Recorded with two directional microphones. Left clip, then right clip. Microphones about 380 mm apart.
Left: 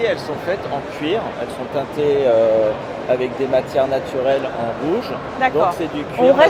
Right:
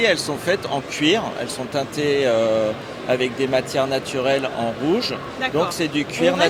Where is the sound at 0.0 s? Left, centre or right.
Right.